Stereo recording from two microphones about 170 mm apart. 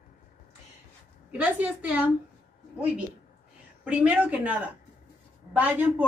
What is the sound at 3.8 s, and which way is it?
A woman's voice, 10° right (ahead or behind).